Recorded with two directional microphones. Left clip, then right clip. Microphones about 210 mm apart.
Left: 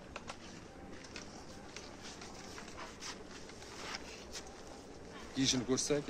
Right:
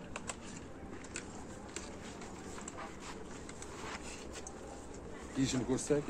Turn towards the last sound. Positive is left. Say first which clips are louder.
# left 1 dB
turn(degrees=50)  # may be behind; listen again after turning